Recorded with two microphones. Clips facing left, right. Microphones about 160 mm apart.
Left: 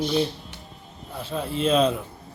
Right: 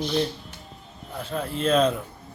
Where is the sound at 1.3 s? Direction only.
5° left (ahead or behind).